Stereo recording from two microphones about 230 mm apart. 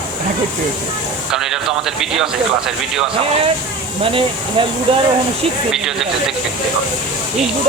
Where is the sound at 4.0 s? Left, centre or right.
Right.